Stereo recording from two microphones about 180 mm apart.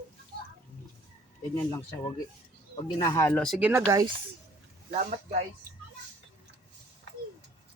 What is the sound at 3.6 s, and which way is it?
Speech, 15° right (ahead or behind).